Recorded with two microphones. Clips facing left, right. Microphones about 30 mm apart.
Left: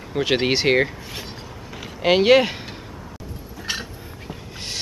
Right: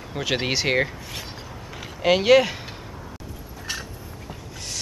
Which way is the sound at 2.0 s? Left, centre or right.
Centre.